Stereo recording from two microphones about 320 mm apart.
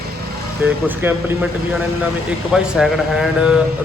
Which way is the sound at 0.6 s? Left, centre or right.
Centre.